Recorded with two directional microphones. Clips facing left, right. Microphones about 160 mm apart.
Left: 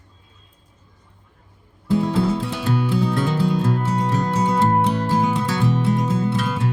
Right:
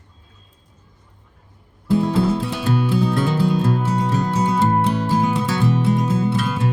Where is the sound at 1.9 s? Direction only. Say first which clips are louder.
Right 2 dB; 10° right (ahead or behind).